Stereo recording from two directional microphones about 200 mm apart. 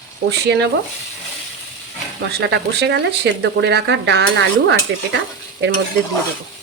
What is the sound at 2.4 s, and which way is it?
Speech, 60° right (ahead or behind).